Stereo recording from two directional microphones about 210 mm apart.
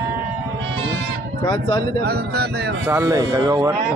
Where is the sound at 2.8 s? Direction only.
10° right (ahead or behind).